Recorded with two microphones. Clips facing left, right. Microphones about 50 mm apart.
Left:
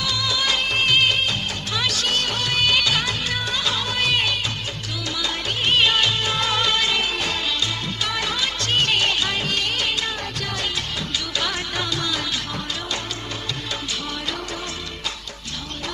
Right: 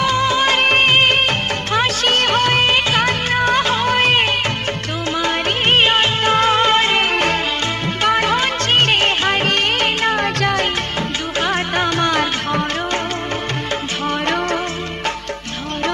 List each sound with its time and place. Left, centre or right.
0.0 s music of bollywood: right
8.0 s music: right
11.3 s music: right